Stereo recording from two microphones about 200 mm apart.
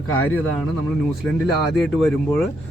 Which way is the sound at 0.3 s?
10° left (ahead or behind).